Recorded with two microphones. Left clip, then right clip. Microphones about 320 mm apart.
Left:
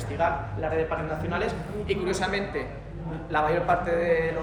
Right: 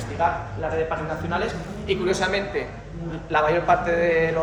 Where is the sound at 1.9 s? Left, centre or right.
Centre.